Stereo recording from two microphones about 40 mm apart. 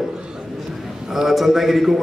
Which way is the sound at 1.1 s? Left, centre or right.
Centre.